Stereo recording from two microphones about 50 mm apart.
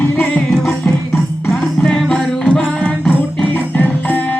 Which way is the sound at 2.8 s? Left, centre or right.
Left.